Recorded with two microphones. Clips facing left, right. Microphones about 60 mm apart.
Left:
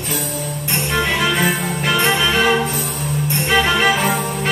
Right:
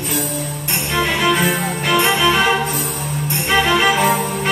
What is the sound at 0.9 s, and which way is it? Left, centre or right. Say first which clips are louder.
Music: right 2 dB; centre.